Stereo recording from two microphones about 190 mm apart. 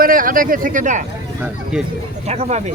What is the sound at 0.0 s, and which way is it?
Speech, 50° right (ahead or behind).